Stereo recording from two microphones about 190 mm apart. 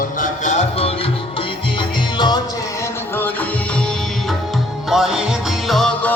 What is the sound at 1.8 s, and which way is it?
Music, 25° left (ahead or behind).